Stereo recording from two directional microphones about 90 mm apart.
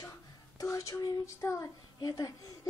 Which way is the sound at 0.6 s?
35° left (ahead or behind).